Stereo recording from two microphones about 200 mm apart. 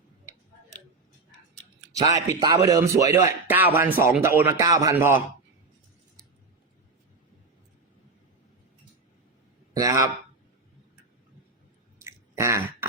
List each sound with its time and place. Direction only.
2.0 s a man's voice: 15° right (ahead or behind)
9.7 s speech: 15° right (ahead or behind)
12.0 s a sound: 15° right (ahead or behind)